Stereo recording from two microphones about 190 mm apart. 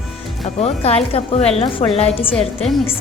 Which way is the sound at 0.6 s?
35° left (ahead or behind).